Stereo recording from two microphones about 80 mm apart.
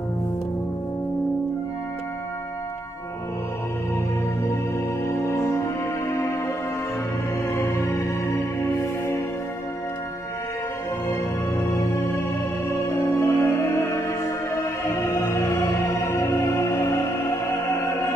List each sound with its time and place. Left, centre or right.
5.0 s music: left
11.1 s music: left